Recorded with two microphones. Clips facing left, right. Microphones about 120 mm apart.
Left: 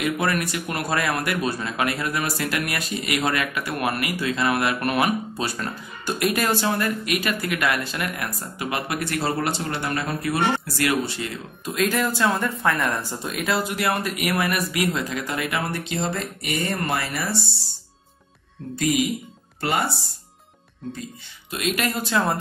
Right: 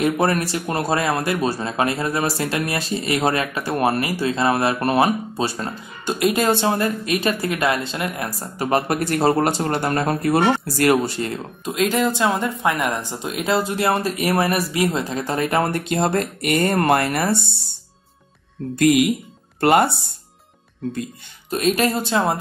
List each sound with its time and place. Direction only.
0.0 s speech: 35° right (ahead or behind)
11.6 s speech: 20° right (ahead or behind); by 17.4 s 55° right (ahead or behind)
18.8 s speech: 60° right (ahead or behind)
21.5 s speech: 40° right (ahead or behind); by 22.4 s 25° right (ahead or behind)